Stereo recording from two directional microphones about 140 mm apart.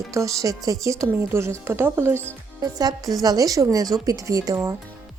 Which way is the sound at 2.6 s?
25° right (ahead or behind).